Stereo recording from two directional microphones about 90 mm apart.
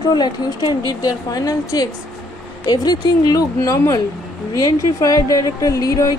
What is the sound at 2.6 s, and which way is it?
Speech, 55° left (ahead or behind).